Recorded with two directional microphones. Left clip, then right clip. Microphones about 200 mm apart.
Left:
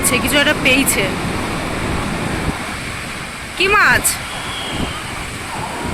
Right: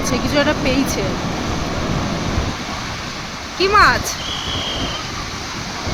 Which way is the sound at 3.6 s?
Centre (ahead or behind).